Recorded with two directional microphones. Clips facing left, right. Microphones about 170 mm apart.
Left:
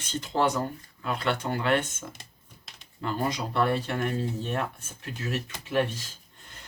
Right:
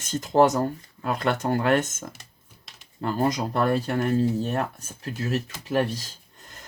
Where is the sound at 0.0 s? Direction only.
45° right (ahead or behind).